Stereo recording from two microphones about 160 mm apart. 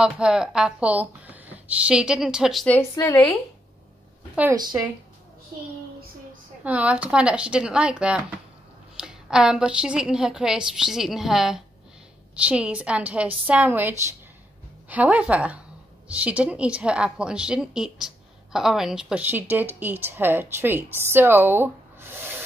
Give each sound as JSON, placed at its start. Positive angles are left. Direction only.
{"t": 0.0, "sound": "a woman's voice", "side_deg": -5}
{"t": 2.6, "sound": "a woman's voice", "side_deg": 15}
{"t": 4.6, "sound": "speech", "side_deg": -25}
{"t": 6.6, "sound": "a woman's voice", "side_deg": -10}